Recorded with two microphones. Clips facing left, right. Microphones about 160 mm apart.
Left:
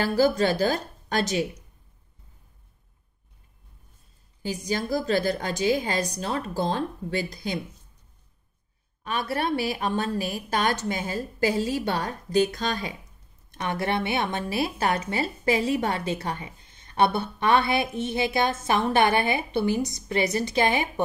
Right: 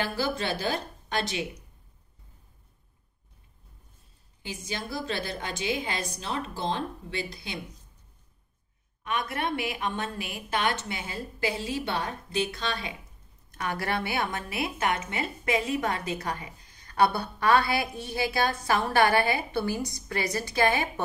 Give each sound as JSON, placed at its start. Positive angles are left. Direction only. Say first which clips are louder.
{"t": 0.0, "sound": "a woman's voice", "louder": "left 8 dB", "side_deg": 40}
{"t": 4.4, "sound": "a woman's voice", "louder": "left 8 dB", "side_deg": 40}
{"t": 9.0, "sound": "a woman's voice", "louder": "left 3 dB", "side_deg": 35}
{"t": 13.5, "sound": "speech", "louder": "left 3 dB", "side_deg": 25}